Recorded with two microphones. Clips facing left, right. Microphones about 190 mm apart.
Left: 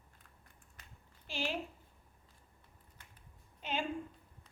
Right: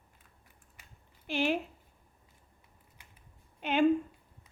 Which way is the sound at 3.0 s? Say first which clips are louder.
Even; 10° right (ahead or behind).